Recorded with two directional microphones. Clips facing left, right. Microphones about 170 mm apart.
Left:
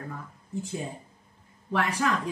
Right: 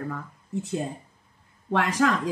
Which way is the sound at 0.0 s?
70° right (ahead or behind).